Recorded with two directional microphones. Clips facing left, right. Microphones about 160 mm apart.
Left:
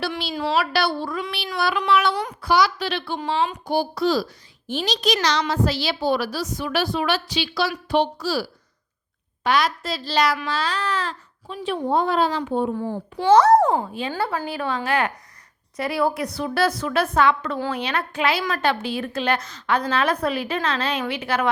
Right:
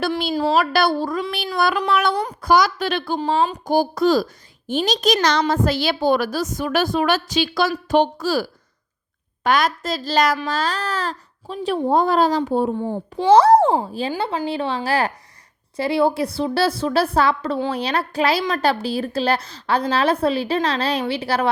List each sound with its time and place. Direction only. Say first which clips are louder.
0.0 s a sound: right 5 dB; 45° right (ahead or behind)
0.3 s a woman's voice: right 3 dB; 35° right (ahead or behind)
12.8 s a woman's voice: right 2 dB; 25° right (ahead or behind)
14.1 s a woman's voice: right 2 dB; 20° right (ahead or behind)